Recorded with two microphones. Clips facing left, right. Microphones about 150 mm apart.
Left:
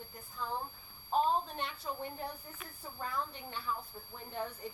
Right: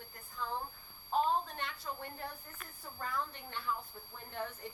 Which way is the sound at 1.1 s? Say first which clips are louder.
Left 1 dB; 15° left (ahead or behind).